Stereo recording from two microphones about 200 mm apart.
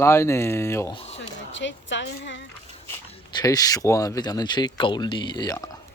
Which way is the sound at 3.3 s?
20° left (ahead or behind).